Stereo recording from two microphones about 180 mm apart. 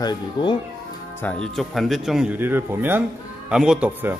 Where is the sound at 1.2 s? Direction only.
5° left (ahead or behind).